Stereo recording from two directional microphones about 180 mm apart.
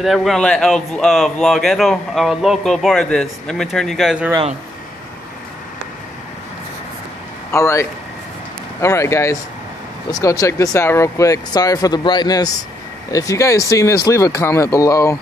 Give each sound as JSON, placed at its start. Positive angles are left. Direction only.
{"t": 0.0, "sound": "a man's voice", "side_deg": 0}
{"t": 7.5, "sound": "speech", "side_deg": 15}
{"t": 8.8, "sound": "speech", "side_deg": 15}